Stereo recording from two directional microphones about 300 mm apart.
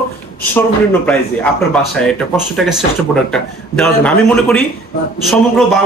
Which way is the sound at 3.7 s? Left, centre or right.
Centre.